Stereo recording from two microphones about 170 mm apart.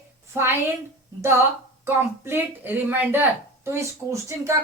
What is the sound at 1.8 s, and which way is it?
Speech, 15° right (ahead or behind).